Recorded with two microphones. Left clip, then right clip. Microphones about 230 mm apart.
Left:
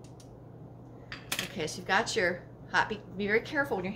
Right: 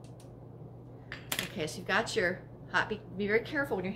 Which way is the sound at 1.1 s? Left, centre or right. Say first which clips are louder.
Left 1 dB; centre.